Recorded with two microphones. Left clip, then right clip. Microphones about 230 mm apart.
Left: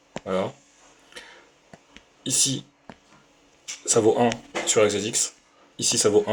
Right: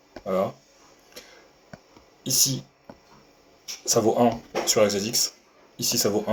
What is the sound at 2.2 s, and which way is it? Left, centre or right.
Speech, left.